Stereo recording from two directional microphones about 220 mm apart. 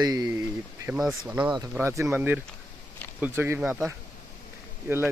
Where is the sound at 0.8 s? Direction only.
Centre (ahead or behind).